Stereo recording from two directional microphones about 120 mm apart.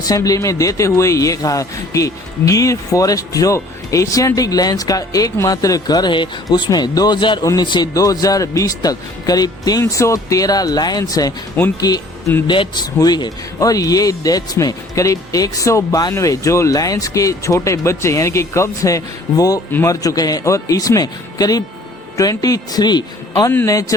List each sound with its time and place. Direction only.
0.0 s a man's voice: 30° left (ahead or behind)
11.6 s speech: 15° left (ahead or behind)
12.5 s a man's voice: 40° left (ahead or behind)